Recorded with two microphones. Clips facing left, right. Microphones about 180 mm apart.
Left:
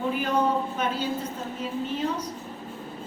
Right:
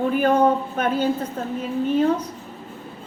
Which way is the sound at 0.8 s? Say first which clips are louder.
Right 5 dB; 55° right (ahead or behind).